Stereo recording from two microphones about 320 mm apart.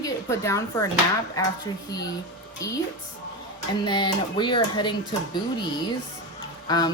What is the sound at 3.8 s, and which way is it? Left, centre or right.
Speech, centre.